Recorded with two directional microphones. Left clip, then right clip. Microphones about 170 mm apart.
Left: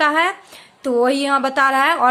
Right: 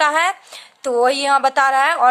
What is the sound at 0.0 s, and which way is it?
A woman's voice, 30° right (ahead or behind).